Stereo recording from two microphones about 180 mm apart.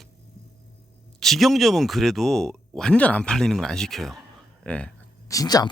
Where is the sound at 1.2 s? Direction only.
Centre (ahead or behind).